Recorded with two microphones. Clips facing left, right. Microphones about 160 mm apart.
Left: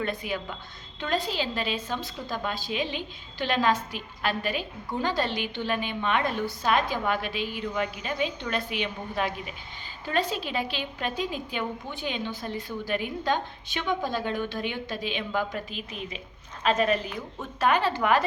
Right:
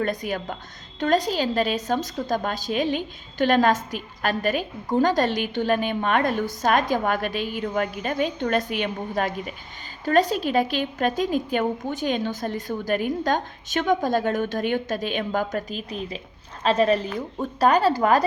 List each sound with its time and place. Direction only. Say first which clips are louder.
0.0 s a woman's voice: right 5 dB; 40° right (ahead or behind)